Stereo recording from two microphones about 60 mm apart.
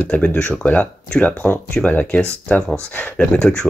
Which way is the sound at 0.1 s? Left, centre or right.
Left.